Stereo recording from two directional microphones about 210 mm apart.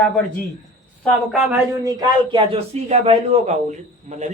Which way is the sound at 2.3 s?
25° right (ahead or behind).